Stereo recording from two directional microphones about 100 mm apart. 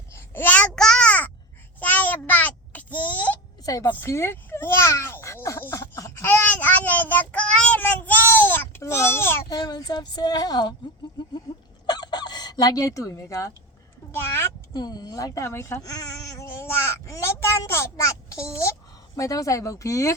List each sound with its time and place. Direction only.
0.1 s babbling: 20° left (ahead or behind)
1.8 s a sound: 15° left (ahead or behind)
3.6 s a woman's voice: 35° left (ahead or behind)
3.8 s a sound: 20° left (ahead or behind)
9.5 s speech: 40° left (ahead or behind)
11.9 s fowl: 45° left (ahead or behind)
14.7 s speech: 45° left (ahead or behind)